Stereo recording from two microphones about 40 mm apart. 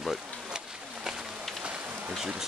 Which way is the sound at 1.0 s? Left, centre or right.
Centre.